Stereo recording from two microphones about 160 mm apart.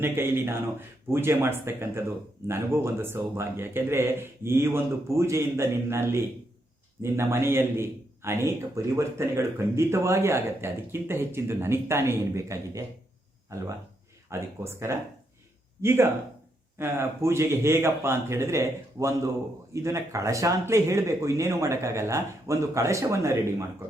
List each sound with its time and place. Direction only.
0.0 s a man's voice: 15° right (ahead or behind)